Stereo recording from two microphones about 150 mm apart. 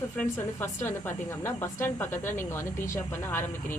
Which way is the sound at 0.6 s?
15° left (ahead or behind).